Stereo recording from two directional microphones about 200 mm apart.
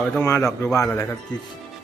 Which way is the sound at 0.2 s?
10° left (ahead or behind).